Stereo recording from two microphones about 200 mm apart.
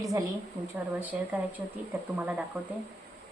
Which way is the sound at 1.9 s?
10° right (ahead or behind).